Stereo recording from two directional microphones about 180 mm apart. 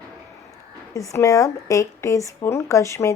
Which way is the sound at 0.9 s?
15° left (ahead or behind).